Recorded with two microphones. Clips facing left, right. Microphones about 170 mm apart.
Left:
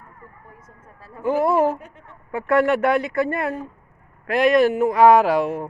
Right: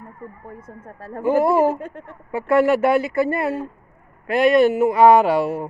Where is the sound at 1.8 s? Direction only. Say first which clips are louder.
Right 10 dB; 55° right (ahead or behind).